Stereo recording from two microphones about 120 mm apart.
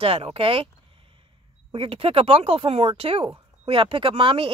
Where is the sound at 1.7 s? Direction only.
50° right (ahead or behind).